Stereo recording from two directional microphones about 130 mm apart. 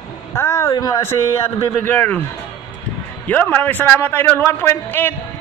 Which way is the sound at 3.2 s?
15° left (ahead or behind).